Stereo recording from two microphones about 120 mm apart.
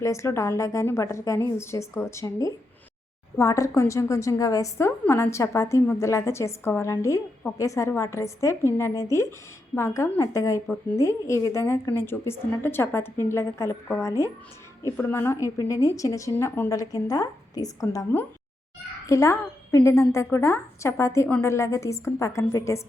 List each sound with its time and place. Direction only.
0.0 s a woman's voice: 25° left (ahead or behind)